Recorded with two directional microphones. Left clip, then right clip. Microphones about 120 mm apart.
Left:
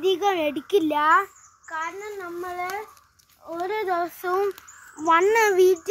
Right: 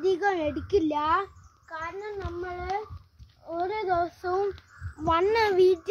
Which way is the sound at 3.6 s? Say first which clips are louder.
Left 2 dB; 25° left (ahead or behind).